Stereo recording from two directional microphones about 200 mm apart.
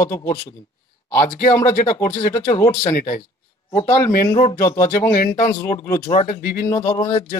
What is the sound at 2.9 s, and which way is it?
Speech, 45° left (ahead or behind).